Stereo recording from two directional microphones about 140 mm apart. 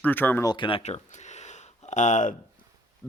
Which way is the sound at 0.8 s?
50° left (ahead or behind).